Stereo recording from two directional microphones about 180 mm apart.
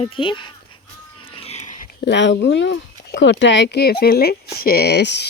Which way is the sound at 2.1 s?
80° left.